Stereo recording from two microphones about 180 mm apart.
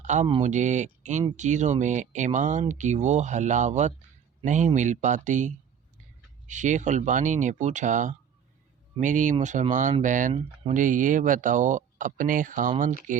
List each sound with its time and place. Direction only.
0.0 s speech: 40° right (ahead or behind)